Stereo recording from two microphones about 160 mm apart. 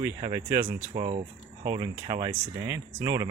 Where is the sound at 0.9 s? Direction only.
35° right (ahead or behind).